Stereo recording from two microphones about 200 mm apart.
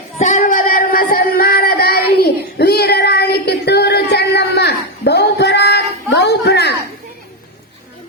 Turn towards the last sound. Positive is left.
turn(degrees=55)  # may be behind; listen again after turning